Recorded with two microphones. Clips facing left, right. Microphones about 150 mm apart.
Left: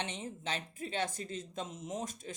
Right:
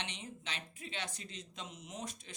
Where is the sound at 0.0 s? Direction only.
45° left (ahead or behind).